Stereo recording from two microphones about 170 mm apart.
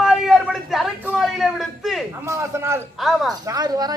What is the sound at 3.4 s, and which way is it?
Speech, 20° right (ahead or behind).